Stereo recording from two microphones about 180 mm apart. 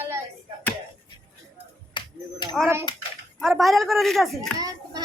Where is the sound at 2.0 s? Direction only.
25° left (ahead or behind).